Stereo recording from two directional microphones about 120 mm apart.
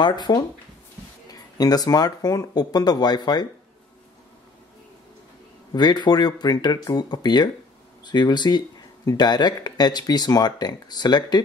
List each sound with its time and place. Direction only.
0.0 s speech: 40° left (ahead or behind)
5.7 s speech: 35° left (ahead or behind)